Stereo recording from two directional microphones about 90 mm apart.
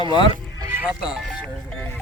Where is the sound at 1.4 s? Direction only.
10° left (ahead or behind).